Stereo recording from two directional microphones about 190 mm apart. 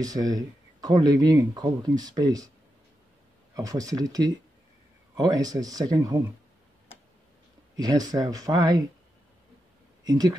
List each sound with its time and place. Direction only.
0.0 s speech: 20° right (ahead or behind)
3.5 s speech: 20° right (ahead or behind)
7.7 s speech: 20° right (ahead or behind)
10.0 s speech: 20° right (ahead or behind)